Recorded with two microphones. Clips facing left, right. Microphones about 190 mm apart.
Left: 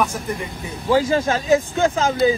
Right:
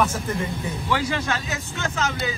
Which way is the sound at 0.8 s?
40° left (ahead or behind).